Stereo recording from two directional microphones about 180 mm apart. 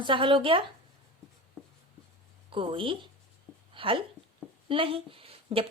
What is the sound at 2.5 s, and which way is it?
Speech, 30° right (ahead or behind).